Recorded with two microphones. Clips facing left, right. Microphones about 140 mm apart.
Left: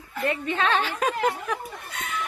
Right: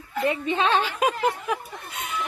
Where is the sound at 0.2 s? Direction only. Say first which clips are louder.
Right 2 dB; 20° right (ahead or behind).